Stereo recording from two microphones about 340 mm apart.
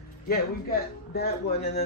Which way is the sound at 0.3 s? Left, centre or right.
Left.